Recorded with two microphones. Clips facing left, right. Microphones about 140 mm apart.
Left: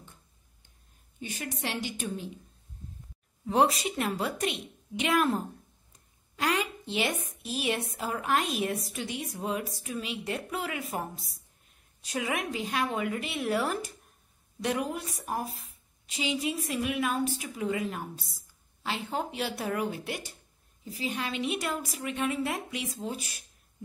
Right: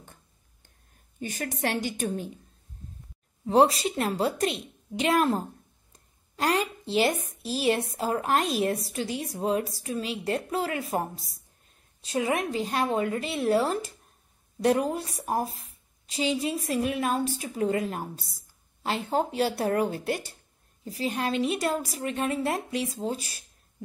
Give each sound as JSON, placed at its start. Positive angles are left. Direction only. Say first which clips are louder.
{"t": 0.0, "sound": "a sound", "louder": "right 2 dB", "side_deg": -50}
{"t": 1.2, "sound": "a woman's voice", "louder": "right 5 dB", "side_deg": -45}
{"t": 3.4, "sound": "a woman's voice", "louder": "right 4 dB", "side_deg": -30}